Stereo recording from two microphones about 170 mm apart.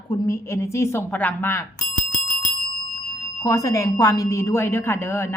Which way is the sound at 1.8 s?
50° left (ahead or behind).